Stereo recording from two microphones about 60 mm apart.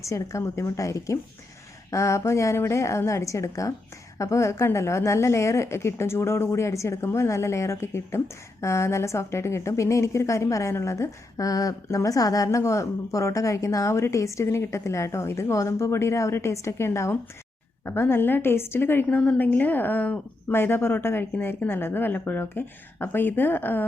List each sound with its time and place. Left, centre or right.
0.0 s a woman's voice: left
19.1 s a woman's voice: left
20.5 s a woman's voice: left